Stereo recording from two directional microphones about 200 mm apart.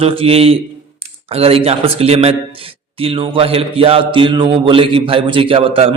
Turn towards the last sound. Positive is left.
turn(degrees=-25)  # may be behind; listen again after turning